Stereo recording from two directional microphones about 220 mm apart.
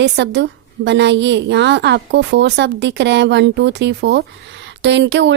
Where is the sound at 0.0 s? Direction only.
50° right (ahead or behind).